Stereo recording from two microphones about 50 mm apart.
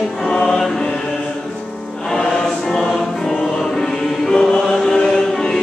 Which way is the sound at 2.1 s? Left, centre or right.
Centre.